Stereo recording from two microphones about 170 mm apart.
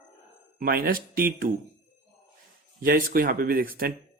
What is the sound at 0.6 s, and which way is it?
Speech, 60° right (ahead or behind).